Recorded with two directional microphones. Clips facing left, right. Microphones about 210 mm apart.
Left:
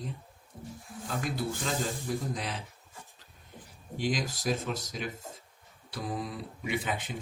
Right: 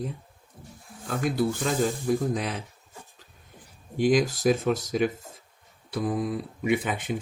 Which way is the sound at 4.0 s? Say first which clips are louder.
Right 10 dB; 50° right (ahead or behind).